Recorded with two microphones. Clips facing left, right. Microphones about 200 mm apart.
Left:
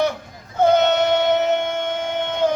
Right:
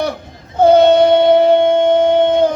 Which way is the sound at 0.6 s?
35° right (ahead or behind).